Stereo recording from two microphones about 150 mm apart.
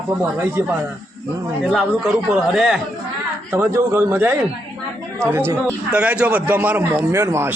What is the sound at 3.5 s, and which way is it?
A man's voice, 15° right (ahead or behind).